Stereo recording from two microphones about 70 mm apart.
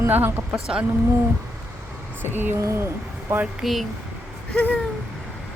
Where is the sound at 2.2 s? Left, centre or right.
Right.